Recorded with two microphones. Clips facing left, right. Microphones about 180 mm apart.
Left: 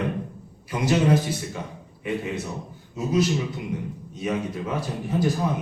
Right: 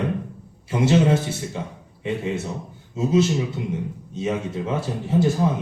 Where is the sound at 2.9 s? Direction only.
25° right (ahead or behind).